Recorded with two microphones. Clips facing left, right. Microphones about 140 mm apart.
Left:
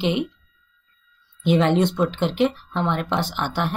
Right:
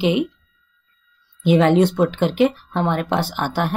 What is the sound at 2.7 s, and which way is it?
Speech, 45° right (ahead or behind).